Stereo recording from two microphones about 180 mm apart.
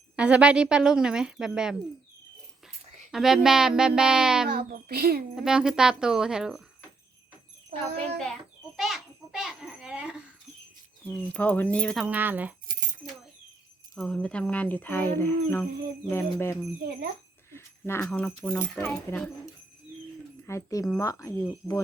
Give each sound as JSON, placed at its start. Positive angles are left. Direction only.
{"t": 0.2, "sound": "a woman's voice", "side_deg": -5}
{"t": 3.1, "sound": "a woman's voice", "side_deg": 0}
{"t": 4.4, "sound": "speech", "side_deg": -60}
{"t": 5.3, "sound": "a woman's voice", "side_deg": -5}
{"t": 8.7, "sound": "a sound", "side_deg": 0}
{"t": 11.0, "sound": "speech", "side_deg": 10}
{"t": 12.0, "sound": "speech", "side_deg": -10}
{"t": 13.0, "sound": "cat", "side_deg": -45}
{"t": 13.9, "sound": "speech", "side_deg": 5}
{"t": 17.5, "sound": "a sound", "side_deg": 15}
{"t": 18.0, "sound": "a woman's voice", "side_deg": 5}
{"t": 20.5, "sound": "speech", "side_deg": 15}